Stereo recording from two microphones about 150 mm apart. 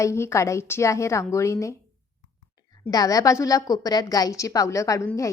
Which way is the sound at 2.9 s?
25° left (ahead or behind).